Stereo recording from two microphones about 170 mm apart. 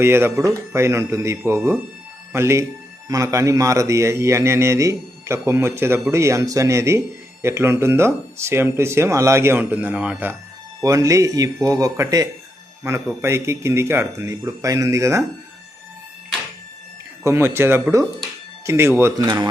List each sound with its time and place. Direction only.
0.0 s a man's voice: 15° right (ahead or behind)
10.8 s a man's voice: 20° right (ahead or behind)
17.2 s a man's voice: 15° right (ahead or behind)